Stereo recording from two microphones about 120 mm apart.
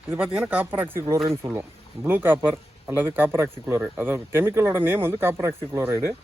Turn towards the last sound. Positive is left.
turn(degrees=-20)  # may be behind; listen again after turning